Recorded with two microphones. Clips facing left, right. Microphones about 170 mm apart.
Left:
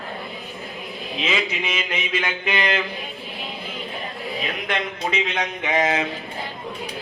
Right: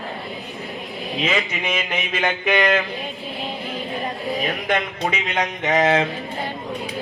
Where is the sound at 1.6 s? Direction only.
55° right (ahead or behind).